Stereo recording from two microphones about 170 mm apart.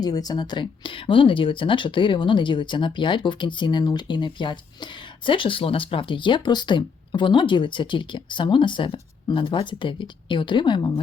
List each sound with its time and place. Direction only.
0.0 s speech: 25° left (ahead or behind)